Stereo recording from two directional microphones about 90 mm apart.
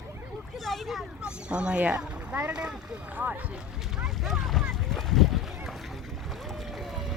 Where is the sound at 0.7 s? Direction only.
Centre (ahead or behind).